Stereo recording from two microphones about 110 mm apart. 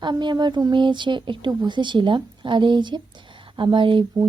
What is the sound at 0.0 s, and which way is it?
Speech, 45° right (ahead or behind).